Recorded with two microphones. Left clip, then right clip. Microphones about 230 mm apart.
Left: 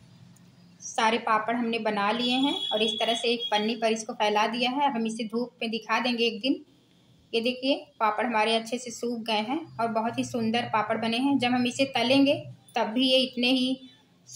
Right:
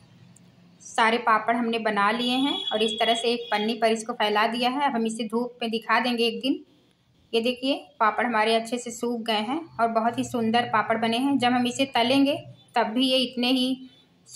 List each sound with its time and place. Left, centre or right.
0.9 s a woman's voice: centre